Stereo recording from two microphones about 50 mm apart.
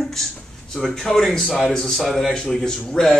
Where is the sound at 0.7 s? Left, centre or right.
Centre.